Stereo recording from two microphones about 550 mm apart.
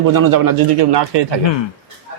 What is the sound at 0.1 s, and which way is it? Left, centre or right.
A man's voice, right.